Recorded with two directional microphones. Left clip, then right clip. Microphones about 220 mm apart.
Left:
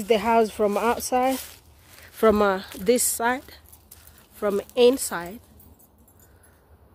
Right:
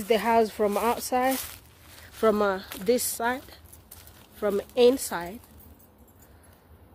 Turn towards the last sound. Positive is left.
turn(degrees=20)  # may be behind; listen again after turning